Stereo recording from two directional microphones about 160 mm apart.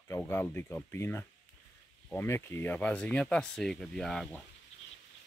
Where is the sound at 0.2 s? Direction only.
10° left (ahead or behind).